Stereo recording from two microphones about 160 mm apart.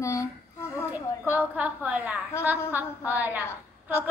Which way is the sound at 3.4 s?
15° left (ahead or behind).